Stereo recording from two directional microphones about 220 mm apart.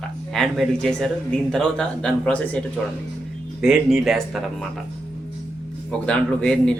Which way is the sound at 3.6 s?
Centre (ahead or behind).